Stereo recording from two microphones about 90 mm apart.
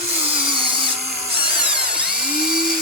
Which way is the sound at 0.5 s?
70° right (ahead or behind).